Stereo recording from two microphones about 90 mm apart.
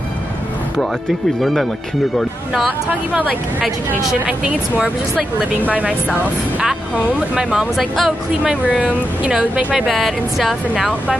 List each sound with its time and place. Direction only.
1.4 s speech: centre (ahead or behind)
4.1 s speech: 10° right (ahead or behind)
7.1 s speech: 10° right (ahead or behind)
8.7 s speech: 10° right (ahead or behind)
9.8 s speech: centre (ahead or behind)